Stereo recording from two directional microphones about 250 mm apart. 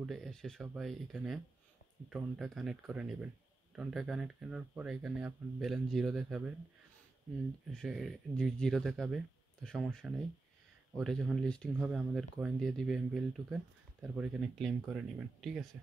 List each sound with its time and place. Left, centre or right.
0.0 s speech: centre
7.7 s speech: centre